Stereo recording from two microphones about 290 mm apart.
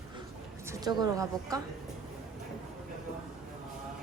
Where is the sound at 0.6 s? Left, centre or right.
Centre.